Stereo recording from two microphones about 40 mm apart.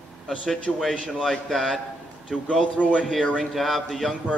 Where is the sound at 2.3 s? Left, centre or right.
Left.